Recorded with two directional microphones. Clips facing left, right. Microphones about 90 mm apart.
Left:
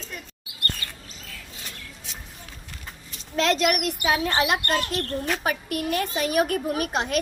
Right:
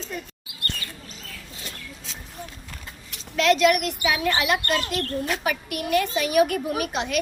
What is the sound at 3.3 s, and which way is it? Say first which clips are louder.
A woman's voice: right 3 dB; 35° left (ahead or behind).